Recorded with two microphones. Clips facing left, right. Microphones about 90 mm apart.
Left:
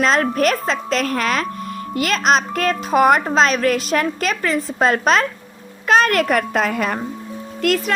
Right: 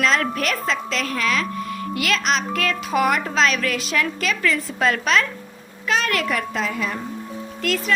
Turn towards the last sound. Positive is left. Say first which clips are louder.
# left 5 dB
turn(degrees=55)  # may be behind; listen again after turning